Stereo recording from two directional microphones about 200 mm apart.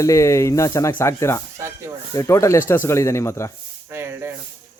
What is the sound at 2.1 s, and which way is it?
Speech, 15° left (ahead or behind).